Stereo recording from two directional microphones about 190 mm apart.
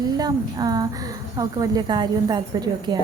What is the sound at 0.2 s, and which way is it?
Speech, 20° right (ahead or behind).